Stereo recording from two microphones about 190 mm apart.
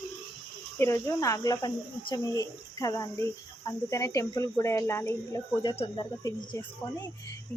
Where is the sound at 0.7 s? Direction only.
15° left (ahead or behind).